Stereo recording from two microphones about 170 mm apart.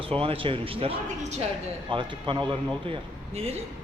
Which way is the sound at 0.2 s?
30° right (ahead or behind).